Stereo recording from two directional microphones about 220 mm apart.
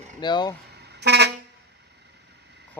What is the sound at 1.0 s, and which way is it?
Vehicle horn, 50° right (ahead or behind).